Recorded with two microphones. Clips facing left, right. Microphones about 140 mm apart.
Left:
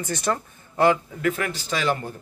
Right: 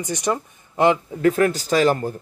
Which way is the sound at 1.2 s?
35° right (ahead or behind).